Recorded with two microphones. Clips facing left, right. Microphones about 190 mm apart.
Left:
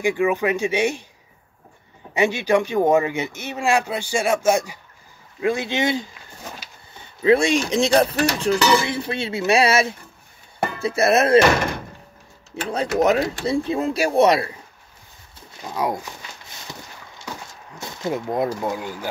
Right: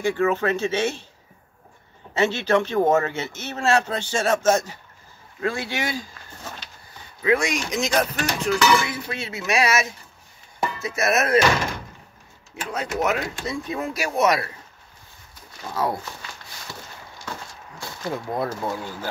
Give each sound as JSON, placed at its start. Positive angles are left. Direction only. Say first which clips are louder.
{"t": 0.0, "sound": "a man's voice", "louder": "left 1 dB", "side_deg": 15}
{"t": 2.1, "sound": "a man's voice", "louder": "left 2 dB", "side_deg": 15}
{"t": 5.4, "sound": "dishes", "louder": "left 5 dB", "side_deg": 20}
{"t": 7.2, "sound": "speech", "louder": "left 5 dB", "side_deg": 30}
{"t": 8.4, "sound": "dishes", "louder": "even", "side_deg": 30}
{"t": 12.7, "sound": "speech", "louder": "left 6 dB", "side_deg": 35}
{"t": 13.5, "sound": "dishes", "louder": "left 6 dB", "side_deg": 30}
{"t": 15.6, "sound": "a man's voice", "louder": "left 1 dB", "side_deg": 15}
{"t": 17.7, "sound": "speech", "louder": "left 4 dB", "side_deg": 20}